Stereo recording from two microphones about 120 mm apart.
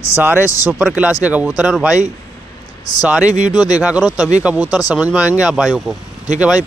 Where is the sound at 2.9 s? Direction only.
35° left (ahead or behind).